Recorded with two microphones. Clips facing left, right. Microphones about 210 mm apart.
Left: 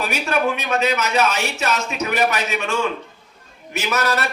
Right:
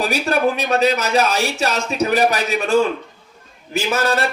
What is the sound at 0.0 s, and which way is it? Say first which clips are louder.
A man's voice: right 3 dB; 35° right (ahead or behind).